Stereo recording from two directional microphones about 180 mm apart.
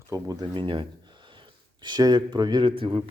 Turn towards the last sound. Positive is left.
turn(degrees=-30)  # may be behind; listen again after turning